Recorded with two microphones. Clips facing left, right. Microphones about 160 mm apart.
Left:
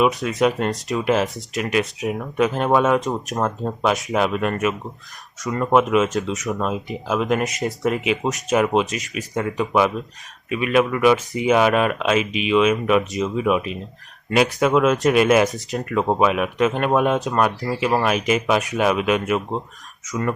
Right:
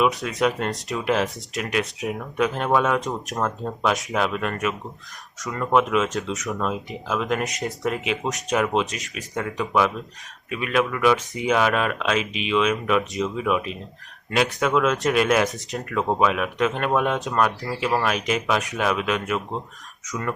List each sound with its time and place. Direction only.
0.0 s speech: centre (ahead or behind)
3.3 s speech: 20° left (ahead or behind)
3.8 s speech: 5° left (ahead or behind)
5.7 s speech: 5° left (ahead or behind)